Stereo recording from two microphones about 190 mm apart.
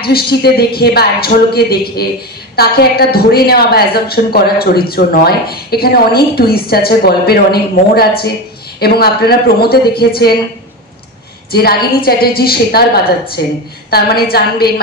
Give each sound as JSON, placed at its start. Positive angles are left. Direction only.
{"t": 0.0, "sound": "a woman's voice", "side_deg": 55}
{"t": 11.5, "sound": "a woman's voice", "side_deg": 55}